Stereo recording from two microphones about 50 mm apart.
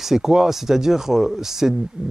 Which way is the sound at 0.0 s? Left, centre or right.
Centre.